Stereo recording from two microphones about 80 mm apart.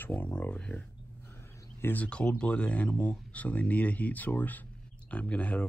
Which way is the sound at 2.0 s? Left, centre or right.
Centre.